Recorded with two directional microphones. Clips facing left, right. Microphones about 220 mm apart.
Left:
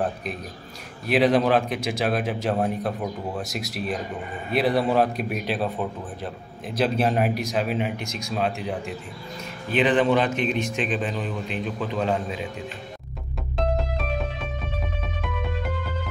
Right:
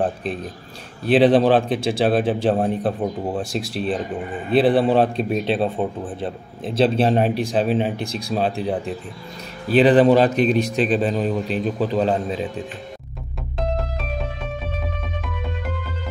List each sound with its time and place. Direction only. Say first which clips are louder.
0.0 s a man's voice: right 5 dB; 30° right (ahead or behind)